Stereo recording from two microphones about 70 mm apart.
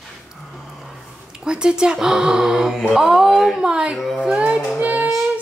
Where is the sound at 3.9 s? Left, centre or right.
Centre.